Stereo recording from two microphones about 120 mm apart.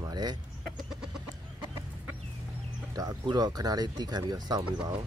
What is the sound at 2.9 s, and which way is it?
Speech, 30° right (ahead or behind).